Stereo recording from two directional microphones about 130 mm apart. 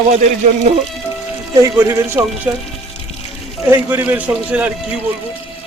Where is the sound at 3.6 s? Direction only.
15° right (ahead or behind).